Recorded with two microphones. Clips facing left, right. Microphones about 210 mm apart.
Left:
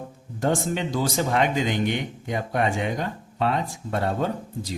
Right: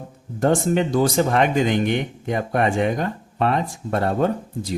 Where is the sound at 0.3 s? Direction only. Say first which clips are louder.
Right 6 dB; 55° right (ahead or behind).